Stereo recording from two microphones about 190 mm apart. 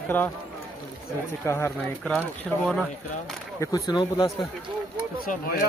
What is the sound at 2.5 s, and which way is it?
Speech, 5° right (ahead or behind).